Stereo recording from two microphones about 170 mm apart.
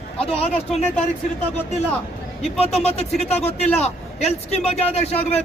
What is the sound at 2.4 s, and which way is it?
Speech, 35° left (ahead or behind).